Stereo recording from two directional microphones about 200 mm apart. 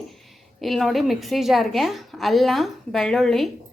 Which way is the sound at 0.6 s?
Centre (ahead or behind).